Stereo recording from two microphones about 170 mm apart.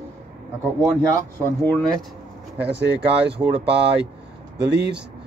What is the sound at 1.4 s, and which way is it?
Speech, 10° left (ahead or behind).